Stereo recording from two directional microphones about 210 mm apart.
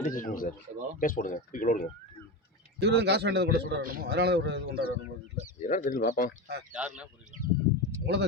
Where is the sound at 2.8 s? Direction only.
50° right (ahead or behind).